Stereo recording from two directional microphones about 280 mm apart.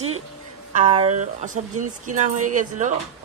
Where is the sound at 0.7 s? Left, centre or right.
Right.